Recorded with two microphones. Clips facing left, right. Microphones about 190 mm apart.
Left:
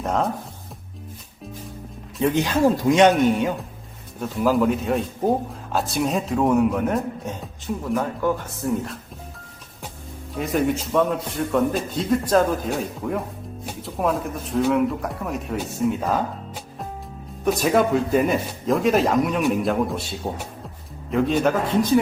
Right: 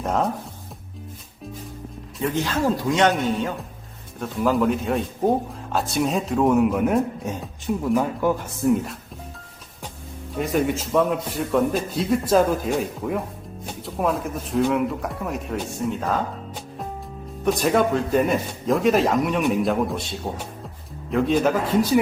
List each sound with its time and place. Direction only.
0.0 s music: centre (ahead or behind)
2.2 s speech: 15° left (ahead or behind)
4.2 s speech: centre (ahead or behind)
7.7 s speech: 15° right (ahead or behind)
10.3 s speech: centre (ahead or behind)
17.4 s speech: centre (ahead or behind)